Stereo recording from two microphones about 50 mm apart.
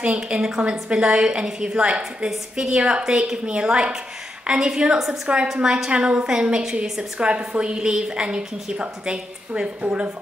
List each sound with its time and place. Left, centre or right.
0.0 s a woman's voice: right
3.0 s a woman's voice: centre